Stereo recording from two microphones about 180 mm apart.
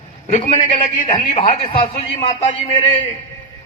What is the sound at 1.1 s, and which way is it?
A man's voice, 35° left (ahead or behind).